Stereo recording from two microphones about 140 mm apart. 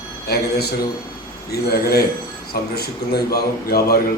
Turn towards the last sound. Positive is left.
turn(degrees=90)